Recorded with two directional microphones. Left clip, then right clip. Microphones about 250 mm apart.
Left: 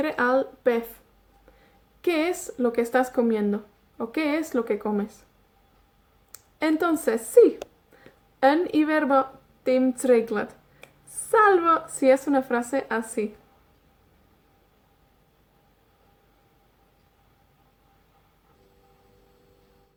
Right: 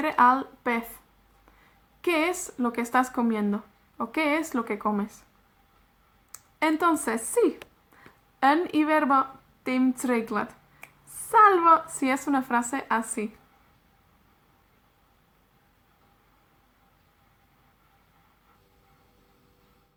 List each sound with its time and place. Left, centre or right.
0.0 s speech: centre
2.0 s speech: centre
6.3 s speech: centre